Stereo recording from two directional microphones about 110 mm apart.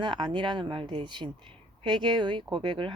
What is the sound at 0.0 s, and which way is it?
A woman's voice, 45° right (ahead or behind).